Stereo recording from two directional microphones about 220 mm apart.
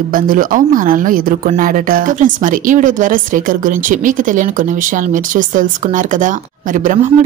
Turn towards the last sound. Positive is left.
turn(degrees=-35)  # may be behind; listen again after turning